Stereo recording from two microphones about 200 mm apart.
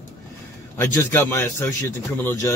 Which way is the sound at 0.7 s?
10° left (ahead or behind).